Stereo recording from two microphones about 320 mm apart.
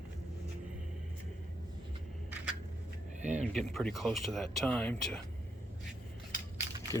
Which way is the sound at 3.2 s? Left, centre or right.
Right.